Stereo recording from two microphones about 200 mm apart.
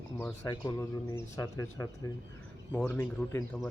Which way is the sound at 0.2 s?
15° left (ahead or behind).